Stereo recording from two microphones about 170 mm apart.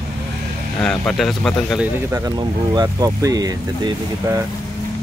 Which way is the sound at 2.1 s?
20° right (ahead or behind).